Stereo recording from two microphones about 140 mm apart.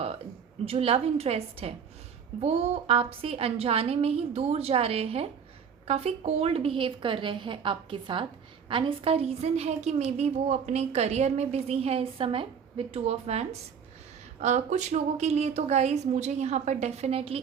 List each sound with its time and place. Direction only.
0.6 s a woman's voice: 45° right (ahead or behind)